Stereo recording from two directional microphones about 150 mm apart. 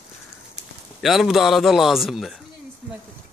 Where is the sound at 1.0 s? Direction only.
Centre (ahead or behind).